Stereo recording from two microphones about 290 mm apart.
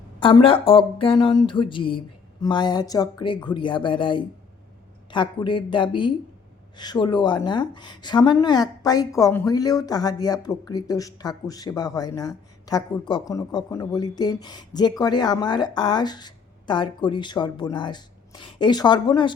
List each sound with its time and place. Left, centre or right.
0.2 s a woman's voice: centre